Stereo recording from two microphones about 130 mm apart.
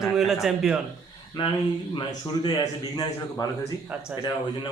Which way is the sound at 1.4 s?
40° left (ahead or behind).